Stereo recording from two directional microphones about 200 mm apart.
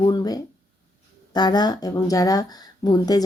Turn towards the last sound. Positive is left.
turn(degrees=20)  # may be behind; listen again after turning